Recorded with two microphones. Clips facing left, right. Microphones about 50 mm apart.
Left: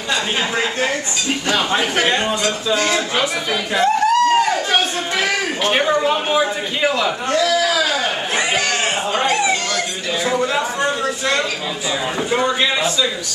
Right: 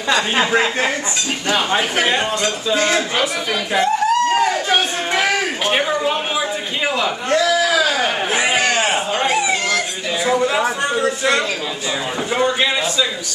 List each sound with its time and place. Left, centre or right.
0.5 s speech: right
1.5 s speech: centre
2.7 s speech: centre
3.7 s a sound: centre
12.3 s a man's voice: centre